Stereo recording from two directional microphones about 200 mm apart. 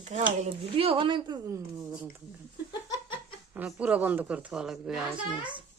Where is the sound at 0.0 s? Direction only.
35° right (ahead or behind); by 2.2 s 15° right (ahead or behind).